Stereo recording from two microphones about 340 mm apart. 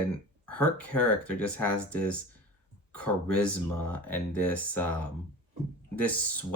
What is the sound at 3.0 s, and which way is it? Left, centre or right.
Speech, centre.